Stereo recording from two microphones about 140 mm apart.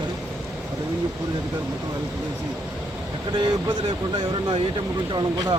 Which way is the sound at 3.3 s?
35° right (ahead or behind).